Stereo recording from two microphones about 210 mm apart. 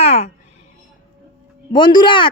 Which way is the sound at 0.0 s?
30° left (ahead or behind).